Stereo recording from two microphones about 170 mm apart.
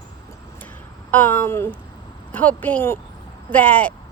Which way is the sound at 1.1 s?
10° left (ahead or behind).